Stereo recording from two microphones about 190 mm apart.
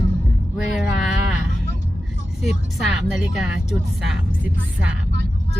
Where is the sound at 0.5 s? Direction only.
Centre (ahead or behind).